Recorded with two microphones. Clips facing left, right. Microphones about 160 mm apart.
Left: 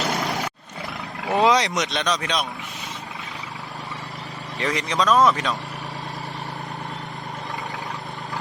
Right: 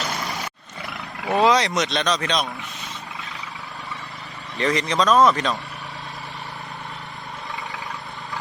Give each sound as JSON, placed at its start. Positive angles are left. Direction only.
{"t": 0.1, "sound": "vehicle", "side_deg": 60}
{"t": 1.2, "sound": "speech", "side_deg": 20}
{"t": 4.6, "sound": "speech", "side_deg": 10}